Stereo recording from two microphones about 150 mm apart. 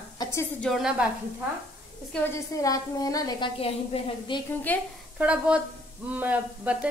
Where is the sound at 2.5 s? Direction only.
25° left (ahead or behind).